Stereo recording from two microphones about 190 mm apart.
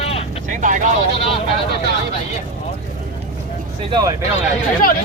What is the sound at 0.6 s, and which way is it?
Speech, 40° right (ahead or behind).